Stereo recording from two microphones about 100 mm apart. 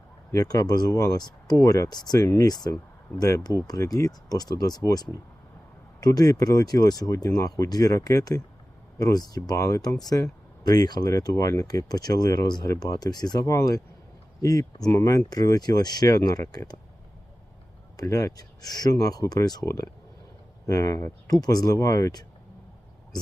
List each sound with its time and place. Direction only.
0.3 s speech: 35° left (ahead or behind)
17.9 s speech: 35° left (ahead or behind)